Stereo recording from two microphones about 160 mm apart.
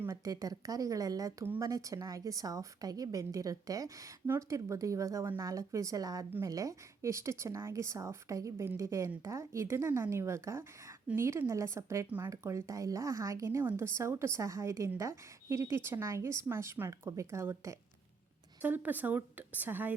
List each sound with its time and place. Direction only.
0.0 s speech: 20° right (ahead or behind)